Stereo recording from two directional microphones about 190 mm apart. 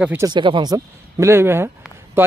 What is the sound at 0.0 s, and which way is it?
Speech, 10° right (ahead or behind).